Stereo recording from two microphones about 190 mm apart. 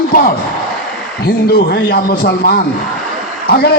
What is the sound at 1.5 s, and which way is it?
A man's voice, 55° left (ahead or behind).